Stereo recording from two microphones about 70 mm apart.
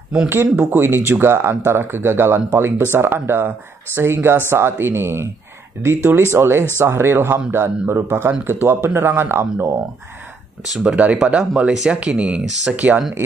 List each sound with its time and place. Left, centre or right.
0.3 s speech: right
6.3 s speech: right
10.8 s speech: centre